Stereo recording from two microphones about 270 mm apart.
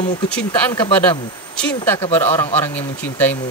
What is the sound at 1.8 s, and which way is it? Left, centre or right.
Speech, centre.